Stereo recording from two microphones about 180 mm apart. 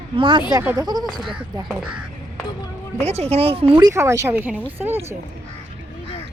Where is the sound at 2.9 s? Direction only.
35° right (ahead or behind); by 5.2 s 10° right (ahead or behind).